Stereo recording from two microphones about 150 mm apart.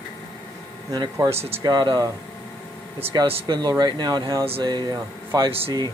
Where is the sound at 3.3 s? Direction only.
40° right (ahead or behind).